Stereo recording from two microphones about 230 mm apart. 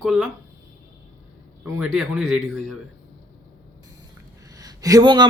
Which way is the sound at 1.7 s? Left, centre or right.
Centre.